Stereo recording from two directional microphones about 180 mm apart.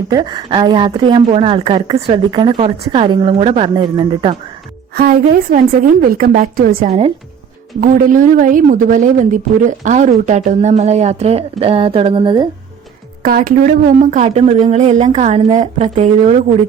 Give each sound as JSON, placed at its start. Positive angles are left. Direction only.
{"t": 0.1, "sound": "a woman's voice", "side_deg": -25}
{"t": 4.9, "sound": "a woman's voice", "side_deg": -50}
{"t": 13.2, "sound": "speech", "side_deg": -50}